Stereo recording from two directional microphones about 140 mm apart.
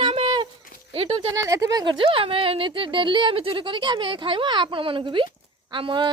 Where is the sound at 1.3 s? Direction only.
20° right (ahead or behind).